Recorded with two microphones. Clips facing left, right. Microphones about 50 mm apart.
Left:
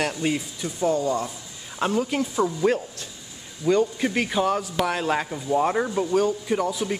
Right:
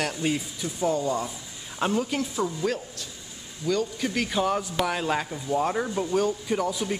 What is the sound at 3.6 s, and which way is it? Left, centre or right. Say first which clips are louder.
Speech: left 5 dB; left.